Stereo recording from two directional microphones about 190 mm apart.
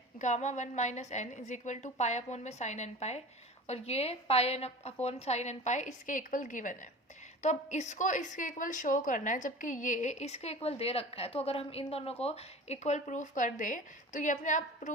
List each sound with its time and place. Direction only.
0.2 s a woman's voice: 35° left (ahead or behind)